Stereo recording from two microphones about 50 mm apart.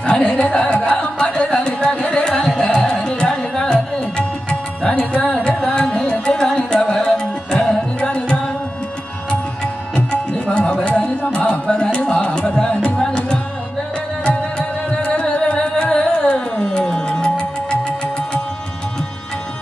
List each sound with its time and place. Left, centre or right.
0.0 s music: left
0.8 s carnatic music: centre
3.2 s music: centre
5.5 s carnatic music: centre
6.8 s music: centre
9.9 s tabla: left
11.3 s music: left
15.1 s music: left